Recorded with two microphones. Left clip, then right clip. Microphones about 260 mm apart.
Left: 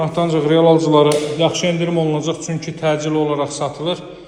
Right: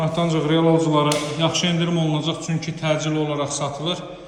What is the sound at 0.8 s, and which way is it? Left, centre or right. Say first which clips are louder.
Speech: left 6 dB; left.